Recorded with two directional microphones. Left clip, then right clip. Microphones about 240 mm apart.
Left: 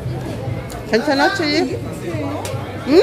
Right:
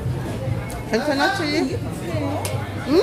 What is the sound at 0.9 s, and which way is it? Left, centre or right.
Speech, centre.